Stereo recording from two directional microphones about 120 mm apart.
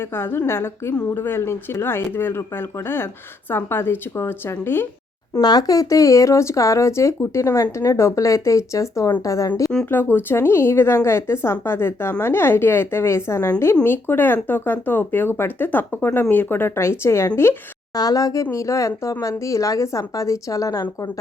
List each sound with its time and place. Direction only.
0.0 s speech: 20° left (ahead or behind)
5.4 s speech: 35° left (ahead or behind)
17.9 s speech: 30° left (ahead or behind)